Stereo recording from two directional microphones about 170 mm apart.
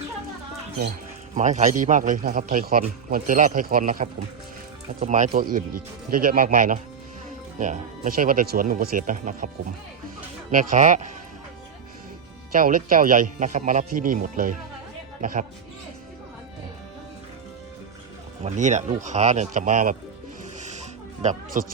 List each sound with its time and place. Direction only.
1.4 s a man's voice: 45° right (ahead or behind)
10.5 s a man's voice: 50° right (ahead or behind)
12.5 s a man's voice: 55° right (ahead or behind)
18.4 s a man's voice: 45° right (ahead or behind)
20.6 s music: 45° right (ahead or behind)